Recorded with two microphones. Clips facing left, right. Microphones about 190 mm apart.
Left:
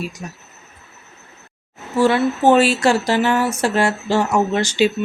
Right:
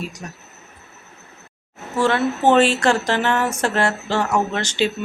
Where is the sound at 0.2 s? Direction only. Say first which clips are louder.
Left 2 dB; 10° left (ahead or behind).